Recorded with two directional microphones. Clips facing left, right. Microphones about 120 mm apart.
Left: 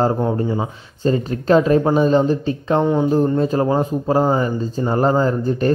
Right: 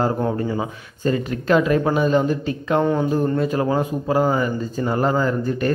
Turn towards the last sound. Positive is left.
turn(degrees=30)  # may be behind; listen again after turning